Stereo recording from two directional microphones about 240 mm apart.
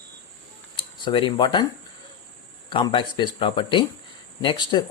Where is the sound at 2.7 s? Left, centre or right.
Centre.